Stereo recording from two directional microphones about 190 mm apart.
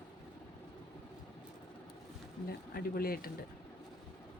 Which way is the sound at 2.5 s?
50° left (ahead or behind).